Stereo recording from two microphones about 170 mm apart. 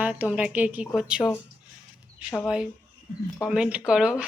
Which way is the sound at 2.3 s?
Centre (ahead or behind).